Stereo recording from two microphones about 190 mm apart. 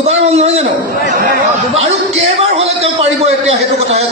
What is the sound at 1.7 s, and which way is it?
A man's voice, 35° right (ahead or behind).